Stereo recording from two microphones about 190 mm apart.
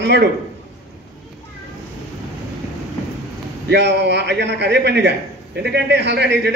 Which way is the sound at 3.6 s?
65° right (ahead or behind).